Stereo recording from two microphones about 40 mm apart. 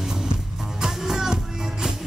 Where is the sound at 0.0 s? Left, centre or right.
Centre.